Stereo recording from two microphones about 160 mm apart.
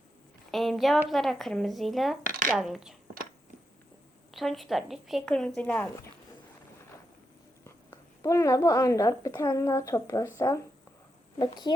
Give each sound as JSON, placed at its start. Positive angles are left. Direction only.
{"t": 0.5, "sound": "a sound", "side_deg": 0}
{"t": 1.1, "sound": "a woman's voice", "side_deg": 0}
{"t": 4.4, "sound": "a woman's voice", "side_deg": 0}
{"t": 7.6, "sound": "a woman's voice", "side_deg": 20}